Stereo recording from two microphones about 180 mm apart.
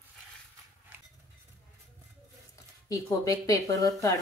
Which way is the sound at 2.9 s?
20° left (ahead or behind).